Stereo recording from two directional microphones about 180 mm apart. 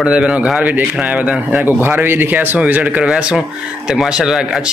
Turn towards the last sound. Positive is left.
turn(degrees=-5)  # may be behind; listen again after turning